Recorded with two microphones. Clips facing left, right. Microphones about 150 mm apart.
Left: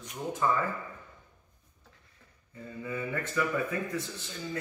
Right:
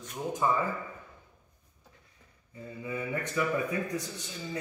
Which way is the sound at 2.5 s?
15° right (ahead or behind).